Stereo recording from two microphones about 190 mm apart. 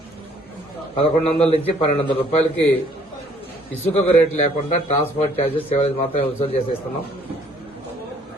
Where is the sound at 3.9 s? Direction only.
35° left (ahead or behind).